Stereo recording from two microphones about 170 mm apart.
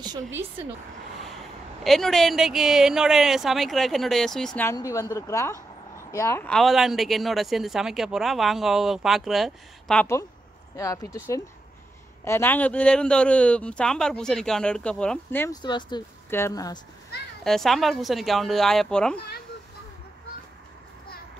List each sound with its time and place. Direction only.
0.3 s speech: 15° right (ahead or behind)
1.9 s speech: centre (ahead or behind)
4.6 s a woman's voice: 20° left (ahead or behind)
6.4 s speech: centre (ahead or behind)
10.8 s speech: 20° left (ahead or behind)
12.3 s speech: 10° left (ahead or behind)
15.5 s speech: 25° left (ahead or behind)
16.3 s speech: 15° left (ahead or behind)
17.4 s speech: centre (ahead or behind)